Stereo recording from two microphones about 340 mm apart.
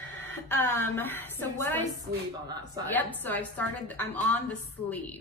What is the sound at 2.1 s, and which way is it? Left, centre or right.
Speech, centre.